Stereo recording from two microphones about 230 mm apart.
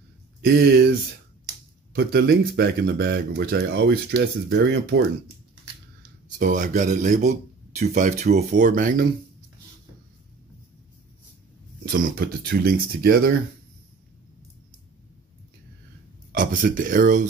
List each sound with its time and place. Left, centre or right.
0.4 s speech: right
2.0 s speech: right
6.3 s speech: right
11.8 s speech: right
16.3 s speech: right